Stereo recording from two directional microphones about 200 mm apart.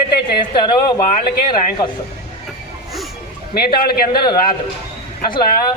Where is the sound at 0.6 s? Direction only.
25° left (ahead or behind).